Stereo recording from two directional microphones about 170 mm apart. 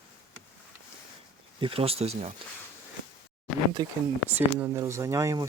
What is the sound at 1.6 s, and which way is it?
Speech, 35° right (ahead or behind).